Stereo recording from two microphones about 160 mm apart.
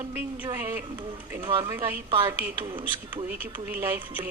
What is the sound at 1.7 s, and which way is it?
Speech, 15° right (ahead or behind).